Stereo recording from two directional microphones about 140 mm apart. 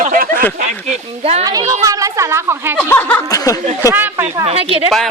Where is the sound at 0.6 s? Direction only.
50° right (ahead or behind).